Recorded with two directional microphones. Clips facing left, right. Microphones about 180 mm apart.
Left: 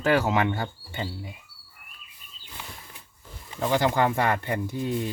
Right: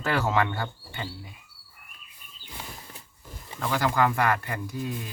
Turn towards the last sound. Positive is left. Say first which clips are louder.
# left 5 dB
turn(degrees=25)  # may be behind; listen again after turning